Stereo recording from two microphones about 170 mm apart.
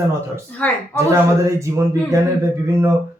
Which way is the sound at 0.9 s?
15° right (ahead or behind).